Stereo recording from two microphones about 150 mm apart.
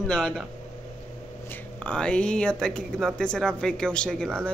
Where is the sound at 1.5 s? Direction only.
10° left (ahead or behind).